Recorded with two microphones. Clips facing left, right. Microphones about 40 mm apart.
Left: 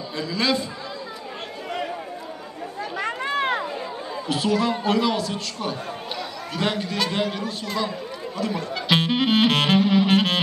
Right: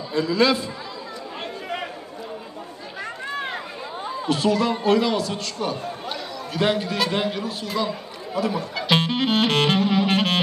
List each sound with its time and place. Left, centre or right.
0.1 s speech: centre
3.0 s a sound: left
4.3 s speech: centre